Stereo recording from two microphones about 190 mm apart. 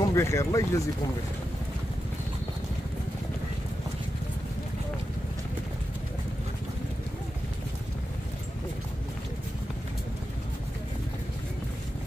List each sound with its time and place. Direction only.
0.0 s speech: 15° left (ahead or behind)